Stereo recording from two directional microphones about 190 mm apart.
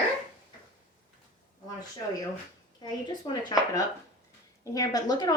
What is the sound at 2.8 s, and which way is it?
Speech, 20° left (ahead or behind).